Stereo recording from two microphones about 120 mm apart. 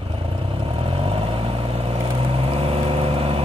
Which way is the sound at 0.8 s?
50° right (ahead or behind).